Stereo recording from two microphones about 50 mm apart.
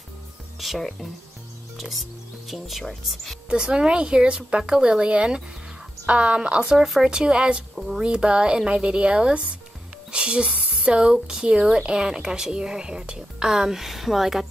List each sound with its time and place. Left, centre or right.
0.6 s speech: centre
3.4 s speech: centre
7.7 s speech: centre
8.0 s speech: centre